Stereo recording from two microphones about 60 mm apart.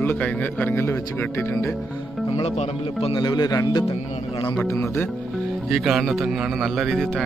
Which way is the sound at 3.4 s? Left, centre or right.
Left.